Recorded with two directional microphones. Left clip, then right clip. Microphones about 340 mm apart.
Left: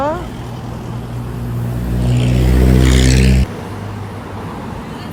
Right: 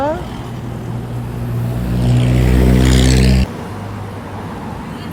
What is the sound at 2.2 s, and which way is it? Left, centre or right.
Vehicle, right.